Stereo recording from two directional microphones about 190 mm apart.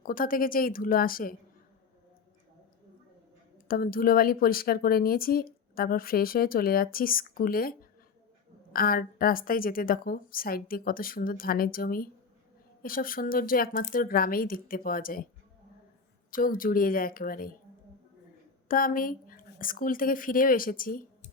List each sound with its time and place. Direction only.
0.0 s speech: 45° left (ahead or behind)
3.7 s speech: 50° left (ahead or behind)
16.3 s speech: 45° left (ahead or behind)
18.7 s a woman's voice: 45° left (ahead or behind)